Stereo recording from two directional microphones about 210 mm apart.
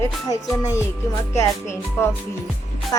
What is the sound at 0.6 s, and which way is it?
Speech, 15° left (ahead or behind).